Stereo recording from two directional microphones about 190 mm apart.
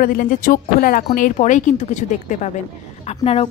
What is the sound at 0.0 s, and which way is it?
Speech, 45° left (ahead or behind).